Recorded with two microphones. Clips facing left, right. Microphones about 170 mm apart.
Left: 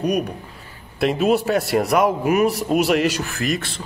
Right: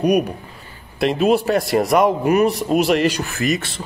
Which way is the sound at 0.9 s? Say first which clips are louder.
Right 2 dB; centre (ahead or behind).